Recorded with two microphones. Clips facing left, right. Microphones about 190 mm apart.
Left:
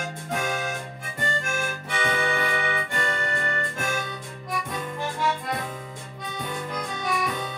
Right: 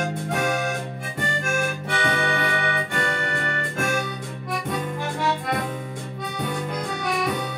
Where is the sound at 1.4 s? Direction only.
70° right (ahead or behind).